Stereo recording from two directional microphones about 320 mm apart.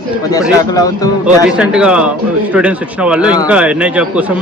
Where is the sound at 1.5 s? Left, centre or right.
Centre.